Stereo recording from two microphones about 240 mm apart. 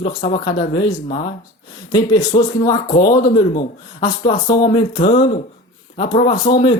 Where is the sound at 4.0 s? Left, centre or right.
Centre.